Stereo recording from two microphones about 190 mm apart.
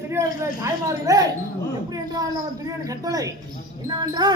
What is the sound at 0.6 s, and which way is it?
A man's voice, 15° right (ahead or behind).